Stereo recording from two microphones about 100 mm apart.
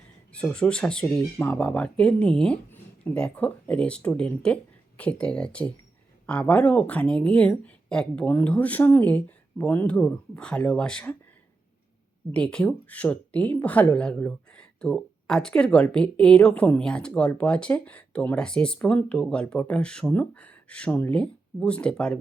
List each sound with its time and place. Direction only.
0.3 s speech: 10° left (ahead or behind)
1.4 s speech: 20° left (ahead or behind)
1.6 s speech: 10° left (ahead or behind)
12.3 s speech: 10° left (ahead or behind)